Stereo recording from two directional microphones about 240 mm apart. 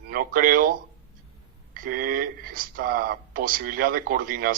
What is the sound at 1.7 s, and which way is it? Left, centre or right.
Speech, right.